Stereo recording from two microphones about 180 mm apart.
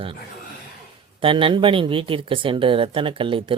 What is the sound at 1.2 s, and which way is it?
Speech, 30° right (ahead or behind).